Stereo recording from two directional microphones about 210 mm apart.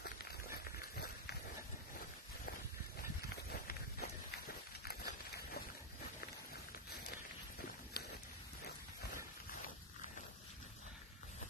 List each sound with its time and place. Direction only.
0.0 s run: 50° left (ahead or behind)
3.4 s run: 45° left (ahead or behind)
8.0 s a sound: 50° left (ahead or behind)